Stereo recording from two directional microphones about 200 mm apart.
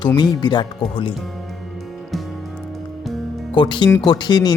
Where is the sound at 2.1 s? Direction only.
Centre (ahead or behind).